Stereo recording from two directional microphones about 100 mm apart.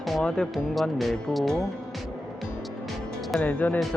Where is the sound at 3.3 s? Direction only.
10° left (ahead or behind).